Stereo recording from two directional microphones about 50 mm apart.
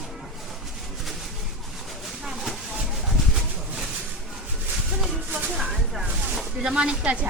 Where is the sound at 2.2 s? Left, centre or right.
Centre.